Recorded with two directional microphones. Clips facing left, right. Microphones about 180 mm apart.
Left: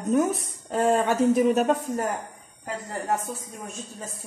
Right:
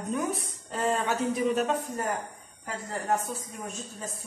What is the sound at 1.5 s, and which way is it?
Speech, 50° left (ahead or behind).